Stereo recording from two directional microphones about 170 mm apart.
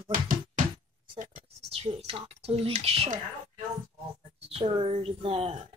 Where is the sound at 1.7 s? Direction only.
35° right (ahead or behind).